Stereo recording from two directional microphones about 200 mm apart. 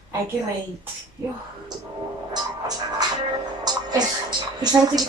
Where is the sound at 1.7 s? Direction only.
20° right (ahead or behind).